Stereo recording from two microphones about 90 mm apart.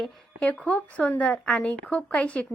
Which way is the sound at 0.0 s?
10° left (ahead or behind).